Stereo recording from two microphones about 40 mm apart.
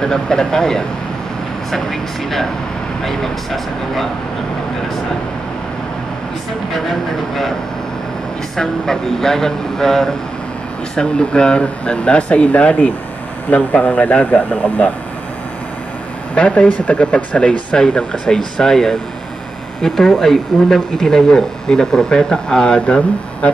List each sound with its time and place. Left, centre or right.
0.0 s speech: centre
8.5 s speech: centre; by 14.9 s left
16.3 s speech: left